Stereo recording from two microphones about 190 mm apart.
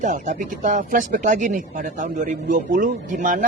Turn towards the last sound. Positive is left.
turn(degrees=-45)  # may be behind; listen again after turning